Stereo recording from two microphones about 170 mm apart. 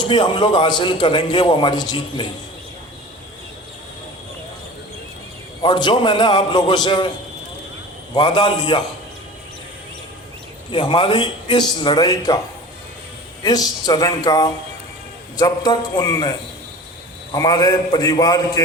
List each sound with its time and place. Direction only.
0.0 s a man's voice: 25° left (ahead or behind)
5.6 s a man's voice: 25° left (ahead or behind)
8.1 s a man's voice: 25° left (ahead or behind)
10.7 s a man's voice: 30° left (ahead or behind)
13.4 s a man's voice: 25° left (ahead or behind)
17.3 s a man's voice: 25° left (ahead or behind)